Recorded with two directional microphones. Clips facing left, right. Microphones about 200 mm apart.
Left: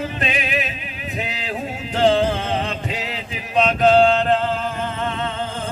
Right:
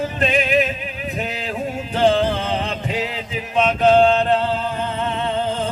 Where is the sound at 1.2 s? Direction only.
45° right (ahead or behind).